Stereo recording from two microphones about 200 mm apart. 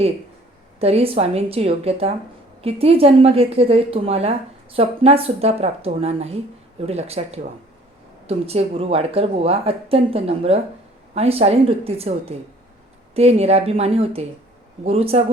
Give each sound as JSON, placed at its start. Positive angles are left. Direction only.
{"t": 0.8, "sound": "a woman's voice", "side_deg": -30}